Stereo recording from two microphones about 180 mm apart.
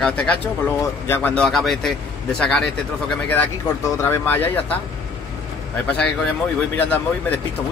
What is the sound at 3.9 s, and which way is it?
Speech, 15° left (ahead or behind).